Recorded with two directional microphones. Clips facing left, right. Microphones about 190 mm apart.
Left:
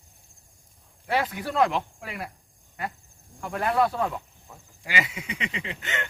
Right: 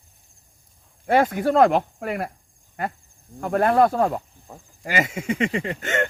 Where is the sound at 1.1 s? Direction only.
50° right (ahead or behind).